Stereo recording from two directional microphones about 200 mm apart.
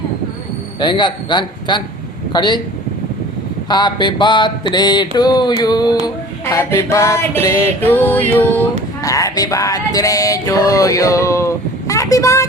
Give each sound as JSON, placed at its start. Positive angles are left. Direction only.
{"t": 0.8, "sound": "mantra", "side_deg": 20}
{"t": 3.7, "sound": "mantra", "side_deg": 20}
{"t": 6.4, "sound": "music", "side_deg": 15}